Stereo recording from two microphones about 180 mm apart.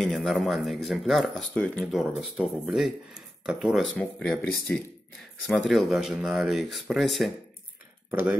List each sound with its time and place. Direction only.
0.0 s speech: centre (ahead or behind)